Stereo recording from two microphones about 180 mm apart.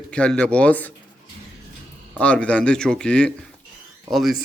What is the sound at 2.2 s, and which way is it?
Speech, 5° left (ahead or behind).